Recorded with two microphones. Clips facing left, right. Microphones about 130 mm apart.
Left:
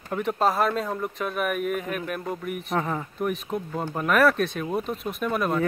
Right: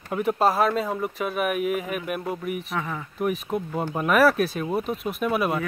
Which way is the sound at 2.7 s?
35° left (ahead or behind).